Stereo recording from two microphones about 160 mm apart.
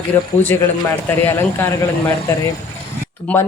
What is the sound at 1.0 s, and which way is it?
Speech, 15° left (ahead or behind).